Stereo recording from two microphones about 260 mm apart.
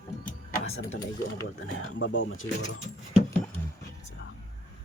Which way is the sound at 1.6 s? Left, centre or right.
Left.